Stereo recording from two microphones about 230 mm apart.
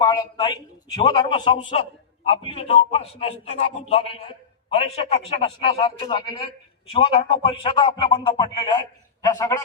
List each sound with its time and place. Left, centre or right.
0.0 s a man's voice: centre